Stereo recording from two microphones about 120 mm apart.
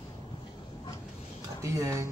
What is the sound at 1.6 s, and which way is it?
Speech, 25° right (ahead or behind).